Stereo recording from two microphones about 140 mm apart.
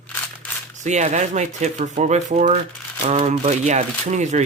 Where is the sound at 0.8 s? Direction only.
55° right (ahead or behind).